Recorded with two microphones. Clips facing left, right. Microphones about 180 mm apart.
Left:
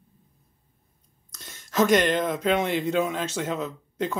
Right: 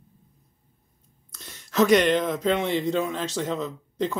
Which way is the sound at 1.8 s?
Centre (ahead or behind).